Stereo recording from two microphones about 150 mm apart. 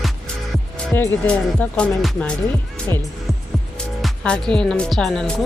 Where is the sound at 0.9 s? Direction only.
15° left (ahead or behind).